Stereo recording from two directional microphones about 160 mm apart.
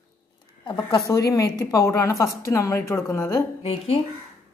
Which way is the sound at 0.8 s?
20° left (ahead or behind).